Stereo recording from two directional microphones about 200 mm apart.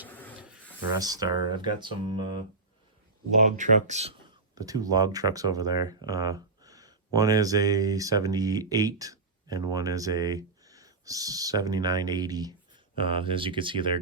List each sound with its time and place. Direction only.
0.9 s speech: 20° right (ahead or behind)
3.4 s speech: 40° right (ahead or behind)
4.5 s speech: 15° right (ahead or behind)